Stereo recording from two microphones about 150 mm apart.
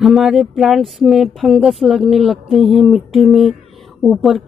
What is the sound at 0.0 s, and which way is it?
Speech, centre (ahead or behind).